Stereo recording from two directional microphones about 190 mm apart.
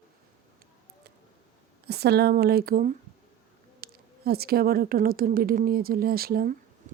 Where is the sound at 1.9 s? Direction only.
55° right (ahead or behind).